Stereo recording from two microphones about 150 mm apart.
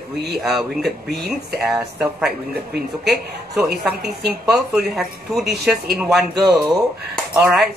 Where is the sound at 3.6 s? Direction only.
5° right (ahead or behind).